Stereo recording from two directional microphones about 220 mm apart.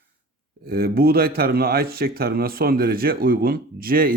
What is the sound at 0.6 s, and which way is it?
Speech, 45° right (ahead or behind).